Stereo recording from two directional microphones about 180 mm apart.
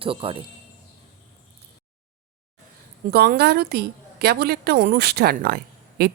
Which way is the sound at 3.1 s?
60° right (ahead or behind).